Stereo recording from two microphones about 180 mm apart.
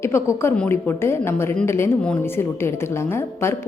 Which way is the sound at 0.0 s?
15° left (ahead or behind).